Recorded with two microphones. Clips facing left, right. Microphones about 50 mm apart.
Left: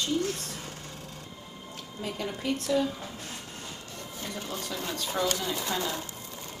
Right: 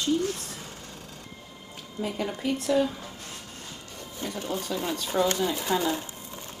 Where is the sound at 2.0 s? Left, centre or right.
Centre.